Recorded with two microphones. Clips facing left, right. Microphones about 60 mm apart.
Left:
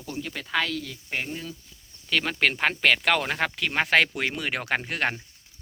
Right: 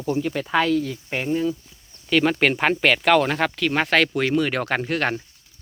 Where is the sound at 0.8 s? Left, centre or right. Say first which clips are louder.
Right 6 dB; right.